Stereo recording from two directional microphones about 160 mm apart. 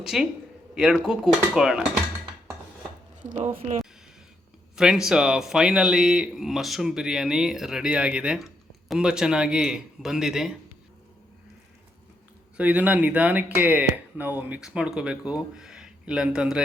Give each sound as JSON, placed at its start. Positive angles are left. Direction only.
{"t": 0.0, "sound": "speech", "side_deg": -5}
{"t": 3.2, "sound": "speech", "side_deg": -50}
{"t": 4.8, "sound": "speech", "side_deg": -5}
{"t": 12.5, "sound": "speech", "side_deg": -10}